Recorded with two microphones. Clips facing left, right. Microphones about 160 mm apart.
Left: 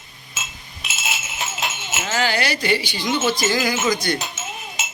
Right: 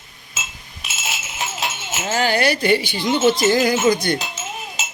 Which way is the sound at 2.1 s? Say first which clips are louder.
Right 4 dB; 50° right (ahead or behind).